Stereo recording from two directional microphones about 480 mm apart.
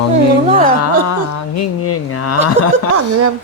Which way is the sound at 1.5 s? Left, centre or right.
Left.